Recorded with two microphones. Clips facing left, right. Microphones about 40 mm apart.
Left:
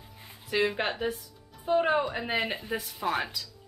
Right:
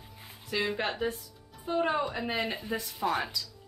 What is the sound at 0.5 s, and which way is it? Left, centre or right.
Speech, left.